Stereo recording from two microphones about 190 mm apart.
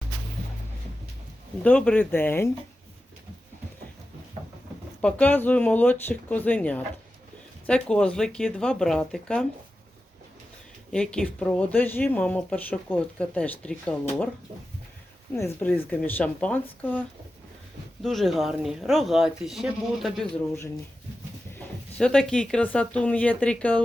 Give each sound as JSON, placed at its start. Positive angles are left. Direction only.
{"t": 1.6, "sound": "speech", "side_deg": 5}
{"t": 4.9, "sound": "speech", "side_deg": 5}
{"t": 10.9, "sound": "speech", "side_deg": 5}
{"t": 15.3, "sound": "speech", "side_deg": 10}
{"t": 18.0, "sound": "speech", "side_deg": 0}
{"t": 21.9, "sound": "speech", "side_deg": 5}